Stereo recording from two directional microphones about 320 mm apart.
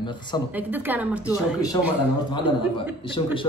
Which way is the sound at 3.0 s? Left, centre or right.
Centre.